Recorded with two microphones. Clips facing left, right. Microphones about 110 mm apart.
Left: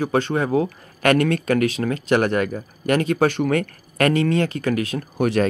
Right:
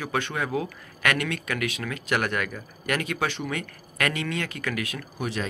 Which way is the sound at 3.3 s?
50° left (ahead or behind).